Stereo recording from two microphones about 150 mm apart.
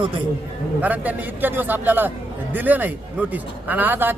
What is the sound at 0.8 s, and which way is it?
A man's voice, 10° right (ahead or behind).